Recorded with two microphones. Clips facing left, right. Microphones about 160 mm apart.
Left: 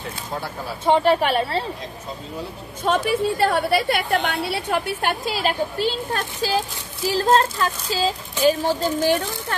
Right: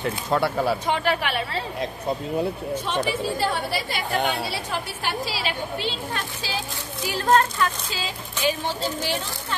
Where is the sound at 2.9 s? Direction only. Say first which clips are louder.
Left 7 dB; 60° left (ahead or behind); by 6.6 s 40° left (ahead or behind).